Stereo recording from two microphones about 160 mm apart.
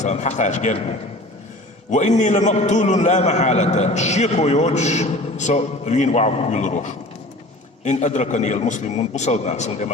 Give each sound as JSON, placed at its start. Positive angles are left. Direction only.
{"t": 0.0, "sound": "a man's voice", "side_deg": 45}